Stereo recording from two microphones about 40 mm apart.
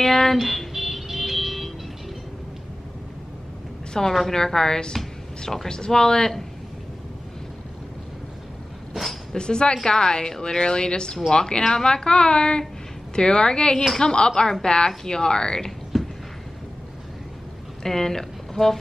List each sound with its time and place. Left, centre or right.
0.0 s music: centre
3.9 s a woman's voice: centre
9.3 s speech: left
15.9 s a sound: centre
17.8 s speech: centre